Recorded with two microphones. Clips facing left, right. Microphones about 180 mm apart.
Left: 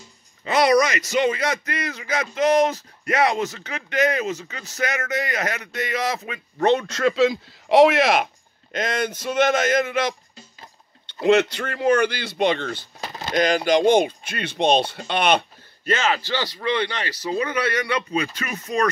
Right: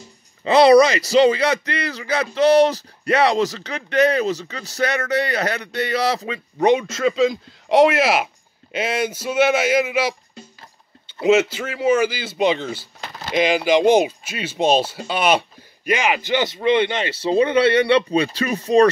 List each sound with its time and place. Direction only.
0.4 s speech: 30° right (ahead or behind)
6.6 s speech: 15° right (ahead or behind)
6.9 s a man's voice: centre (ahead or behind); by 18.9 s 30° right (ahead or behind)